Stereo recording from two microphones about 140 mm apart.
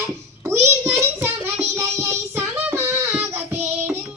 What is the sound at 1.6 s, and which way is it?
Child singing, 20° right (ahead or behind).